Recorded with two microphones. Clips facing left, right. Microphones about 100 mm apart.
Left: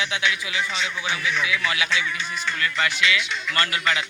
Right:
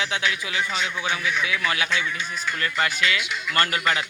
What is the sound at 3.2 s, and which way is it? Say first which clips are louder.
Speech: even; 5° right (ahead or behind).